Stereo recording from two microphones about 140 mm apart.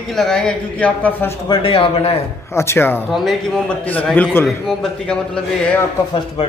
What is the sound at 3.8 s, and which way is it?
A man's voice, 10° left (ahead or behind).